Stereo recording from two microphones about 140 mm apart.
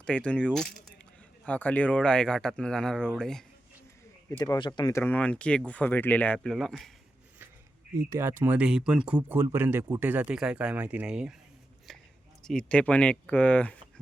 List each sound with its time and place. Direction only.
0.0 s speech: 10° left (ahead or behind)
4.3 s speech: 25° left (ahead or behind)
4.9 s speech: 15° left (ahead or behind)
7.9 s speech: 20° right (ahead or behind); by 11.3 s 5° right (ahead or behind)
11.9 s a sound: 5° left (ahead or behind)
12.4 s speech: 5° left (ahead or behind)